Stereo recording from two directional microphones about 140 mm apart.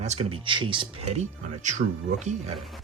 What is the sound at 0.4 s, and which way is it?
Speech, 35° right (ahead or behind).